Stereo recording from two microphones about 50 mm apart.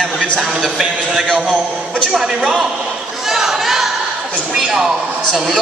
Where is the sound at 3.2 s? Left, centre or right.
Centre.